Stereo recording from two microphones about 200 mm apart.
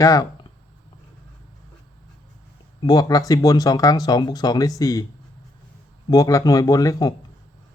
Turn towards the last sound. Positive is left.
turn(degrees=20)  # may be behind; listen again after turning